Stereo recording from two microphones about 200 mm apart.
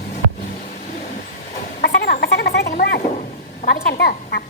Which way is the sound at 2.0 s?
50° left (ahead or behind).